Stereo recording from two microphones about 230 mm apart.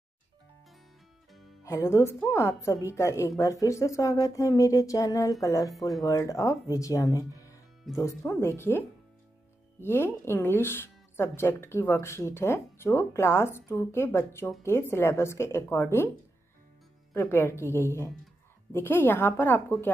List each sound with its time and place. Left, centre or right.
1.6 s speech: centre
5.8 s speech: centre
6.0 s speech: centre
17.1 s speech: centre